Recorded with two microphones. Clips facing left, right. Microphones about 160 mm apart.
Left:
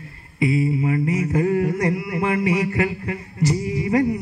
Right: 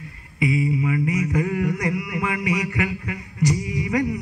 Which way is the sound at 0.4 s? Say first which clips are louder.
Left 2 dB; 30° left (ahead or behind).